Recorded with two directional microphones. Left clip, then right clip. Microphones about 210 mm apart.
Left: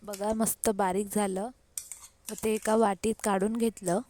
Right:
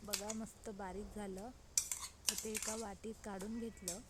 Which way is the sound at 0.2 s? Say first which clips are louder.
Left 17 dB; 50° left (ahead or behind).